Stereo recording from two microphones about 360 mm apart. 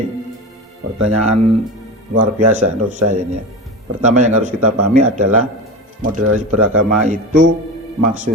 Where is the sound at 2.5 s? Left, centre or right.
Centre.